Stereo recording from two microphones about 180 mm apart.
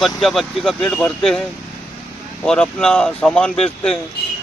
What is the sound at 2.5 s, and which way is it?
Speech, 5° left (ahead or behind).